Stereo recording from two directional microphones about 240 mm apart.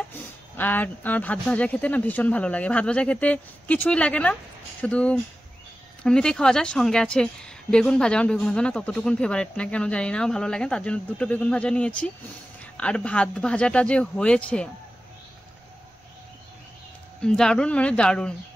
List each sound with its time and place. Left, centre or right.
0.6 s a woman's voice: centre
17.2 s a woman's voice: centre